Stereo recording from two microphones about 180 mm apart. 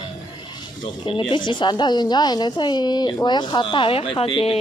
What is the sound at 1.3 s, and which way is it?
A woman's voice, 25° left (ahead or behind).